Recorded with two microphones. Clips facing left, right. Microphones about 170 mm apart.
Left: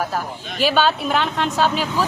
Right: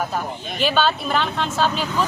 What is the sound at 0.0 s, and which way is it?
A woman's voice, 5° left (ahead or behind).